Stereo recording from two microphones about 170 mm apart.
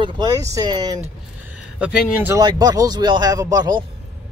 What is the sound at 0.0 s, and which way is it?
Speech, 20° right (ahead or behind).